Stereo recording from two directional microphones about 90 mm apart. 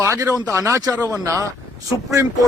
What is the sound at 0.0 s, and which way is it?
A man's voice, 30° right (ahead or behind).